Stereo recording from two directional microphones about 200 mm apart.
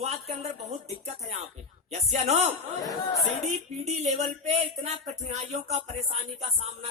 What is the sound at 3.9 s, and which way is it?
Speech, 35° right (ahead or behind).